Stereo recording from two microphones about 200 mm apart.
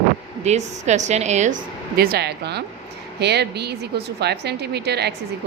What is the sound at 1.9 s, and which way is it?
A woman's voice, 50° right (ahead or behind).